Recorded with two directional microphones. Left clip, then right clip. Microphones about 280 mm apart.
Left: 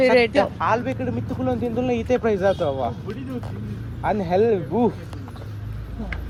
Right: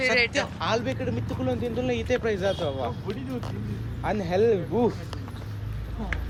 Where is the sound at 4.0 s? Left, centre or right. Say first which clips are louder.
Left 4 dB; centre.